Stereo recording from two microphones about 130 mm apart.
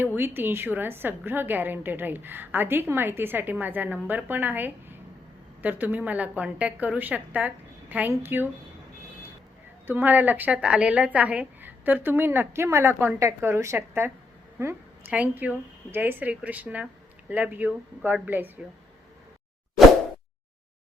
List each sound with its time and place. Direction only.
0.2 s a woman's voice: 15° right (ahead or behind)
9.8 s a woman's voice: 15° right (ahead or behind)
15.1 s a woman's voice: 10° right (ahead or behind)